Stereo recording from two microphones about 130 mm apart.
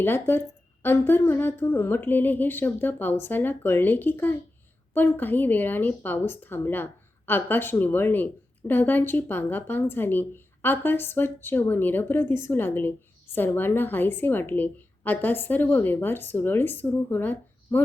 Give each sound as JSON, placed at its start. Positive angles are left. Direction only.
{"t": 0.0, "sound": "speech", "side_deg": 15}